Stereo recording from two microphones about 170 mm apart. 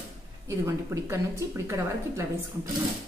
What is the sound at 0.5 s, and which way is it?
A woman's voice, 15° right (ahead or behind).